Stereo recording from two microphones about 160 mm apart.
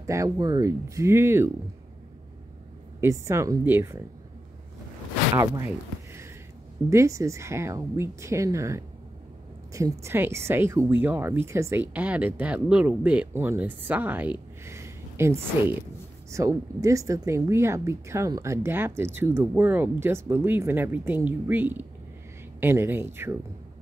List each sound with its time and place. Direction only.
0.0 s speech: 20° right (ahead or behind)
3.0 s speech: 15° right (ahead or behind)
5.3 s speech: 25° right (ahead or behind)
6.9 s speech: 20° right (ahead or behind)